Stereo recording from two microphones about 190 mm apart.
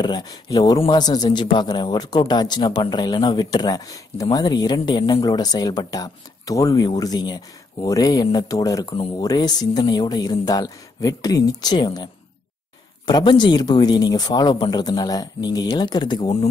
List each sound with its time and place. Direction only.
0.0 s speech: 20° left (ahead or behind)